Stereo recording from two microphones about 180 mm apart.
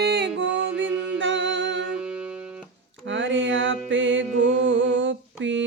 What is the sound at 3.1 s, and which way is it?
Music, 90° right.